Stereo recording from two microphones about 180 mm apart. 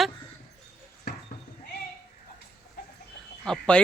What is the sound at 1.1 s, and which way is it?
Basketball bounce, 65° left (ahead or behind).